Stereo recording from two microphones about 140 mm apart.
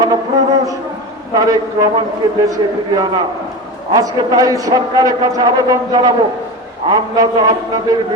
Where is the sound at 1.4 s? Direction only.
25° right (ahead or behind).